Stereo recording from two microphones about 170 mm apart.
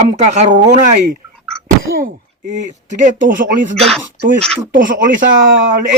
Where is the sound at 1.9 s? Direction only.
55° right (ahead or behind).